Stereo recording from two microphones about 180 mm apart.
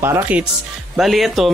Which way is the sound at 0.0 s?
10° right (ahead or behind).